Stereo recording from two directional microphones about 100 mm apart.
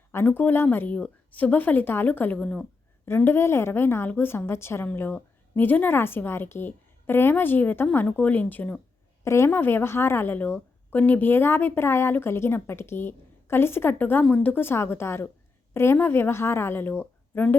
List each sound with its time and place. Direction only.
0.1 s speech: 20° left (ahead or behind)
3.1 s a woman's voice: 20° left (ahead or behind)
9.2 s a woman's voice: 30° left (ahead or behind)